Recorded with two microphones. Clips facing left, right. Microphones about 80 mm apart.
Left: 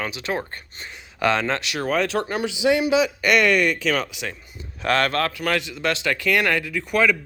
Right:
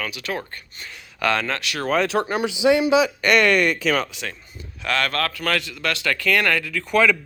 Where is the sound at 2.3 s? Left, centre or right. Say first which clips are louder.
Right 2 dB; right.